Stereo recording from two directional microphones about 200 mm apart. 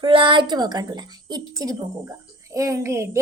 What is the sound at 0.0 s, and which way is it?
A woman's voice, 25° right (ahead or behind).